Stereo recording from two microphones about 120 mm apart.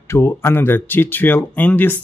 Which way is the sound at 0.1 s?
20° left (ahead or behind).